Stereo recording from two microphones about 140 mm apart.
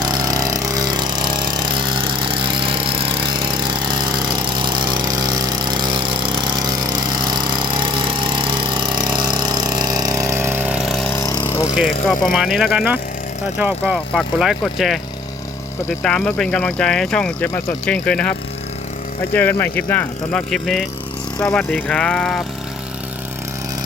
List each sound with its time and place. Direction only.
0.0 s a sound: 30° right (ahead or behind); by 11.1 s centre (ahead or behind)
11.1 s vehicle: 20° left (ahead or behind)
11.4 s lawn mower: 20° left (ahead or behind)
11.8 s speech: centre (ahead or behind)
13.9 s speech: centre (ahead or behind)
16.0 s speech: 5° left (ahead or behind)
20.5 s speech: centre (ahead or behind)